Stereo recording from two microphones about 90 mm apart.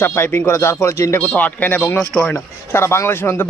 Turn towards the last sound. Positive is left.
turn(degrees=25)  # may be behind; listen again after turning